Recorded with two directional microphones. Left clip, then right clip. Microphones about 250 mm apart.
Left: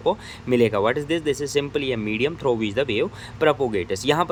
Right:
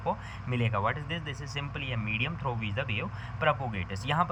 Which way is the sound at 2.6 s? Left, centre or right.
Left.